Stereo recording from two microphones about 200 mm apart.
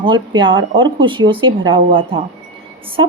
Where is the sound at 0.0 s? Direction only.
25° right (ahead or behind).